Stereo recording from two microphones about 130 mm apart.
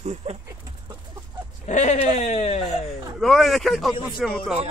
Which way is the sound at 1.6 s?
65° left (ahead or behind).